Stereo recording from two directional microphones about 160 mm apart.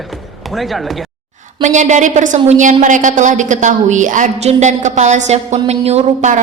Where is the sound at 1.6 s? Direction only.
50° right (ahead or behind).